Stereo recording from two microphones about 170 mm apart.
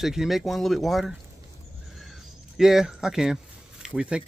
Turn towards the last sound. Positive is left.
turn(degrees=-5)  # may be behind; listen again after turning